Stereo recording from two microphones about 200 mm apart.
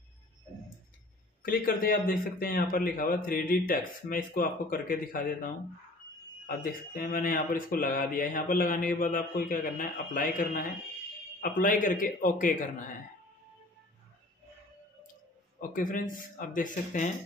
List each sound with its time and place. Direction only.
1.4 s speech: 45° left (ahead or behind)
15.7 s speech: 45° left (ahead or behind)